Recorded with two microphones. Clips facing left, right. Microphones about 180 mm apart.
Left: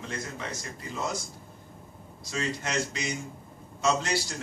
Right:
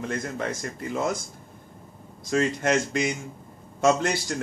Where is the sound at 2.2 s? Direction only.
55° right (ahead or behind).